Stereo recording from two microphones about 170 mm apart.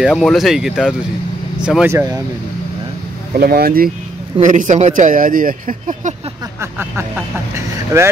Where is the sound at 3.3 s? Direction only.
65° right (ahead or behind).